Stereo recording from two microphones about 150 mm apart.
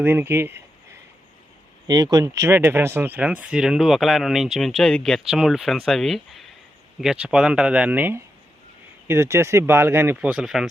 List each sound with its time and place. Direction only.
0.0 s speech: 15° right (ahead or behind)
1.9 s speech: 25° right (ahead or behind); by 10.7 s 5° right (ahead or behind)